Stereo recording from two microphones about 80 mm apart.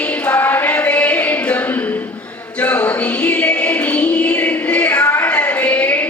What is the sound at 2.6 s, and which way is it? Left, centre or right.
Music, centre.